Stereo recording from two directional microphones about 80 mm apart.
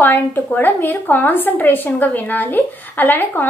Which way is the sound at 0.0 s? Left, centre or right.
Left.